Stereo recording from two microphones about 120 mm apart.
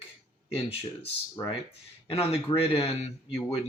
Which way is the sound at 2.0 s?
55° left (ahead or behind).